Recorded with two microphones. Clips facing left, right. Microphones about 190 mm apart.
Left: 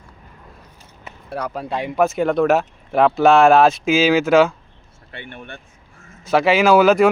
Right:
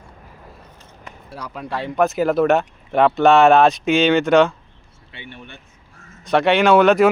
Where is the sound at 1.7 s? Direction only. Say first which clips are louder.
Even; 15° left (ahead or behind).